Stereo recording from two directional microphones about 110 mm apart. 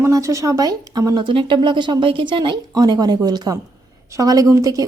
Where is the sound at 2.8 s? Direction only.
35° right (ahead or behind).